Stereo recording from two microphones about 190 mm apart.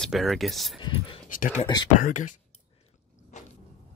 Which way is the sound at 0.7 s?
25° left (ahead or behind).